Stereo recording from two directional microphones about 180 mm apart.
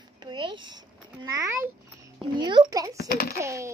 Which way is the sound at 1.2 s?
20° right (ahead or behind).